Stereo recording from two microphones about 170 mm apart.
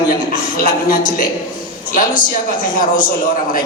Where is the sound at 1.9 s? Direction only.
55° left (ahead or behind).